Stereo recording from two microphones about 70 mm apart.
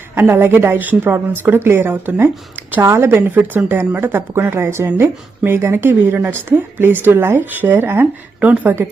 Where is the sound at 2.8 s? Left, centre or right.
Right.